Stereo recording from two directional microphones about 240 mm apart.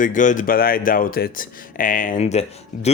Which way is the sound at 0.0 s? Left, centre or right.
Left.